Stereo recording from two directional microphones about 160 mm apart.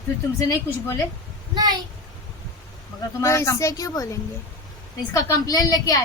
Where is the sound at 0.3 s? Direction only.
20° left (ahead or behind).